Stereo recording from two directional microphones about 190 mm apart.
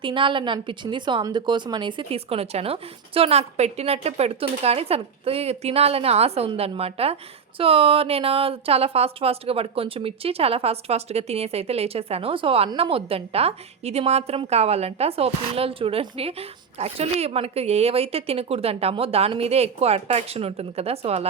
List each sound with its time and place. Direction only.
0.0 s speech: 25° right (ahead or behind)